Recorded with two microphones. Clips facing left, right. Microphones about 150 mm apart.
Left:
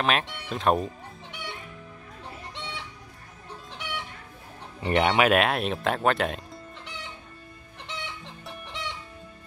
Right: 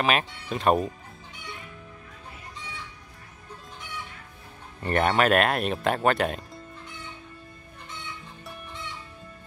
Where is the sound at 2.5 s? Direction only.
75° left (ahead or behind).